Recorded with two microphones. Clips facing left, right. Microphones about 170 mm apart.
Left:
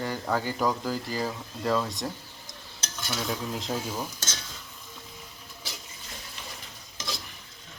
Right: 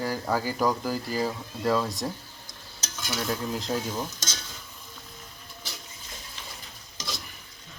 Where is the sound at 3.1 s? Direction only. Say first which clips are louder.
Right 2 dB; centre (ahead or behind).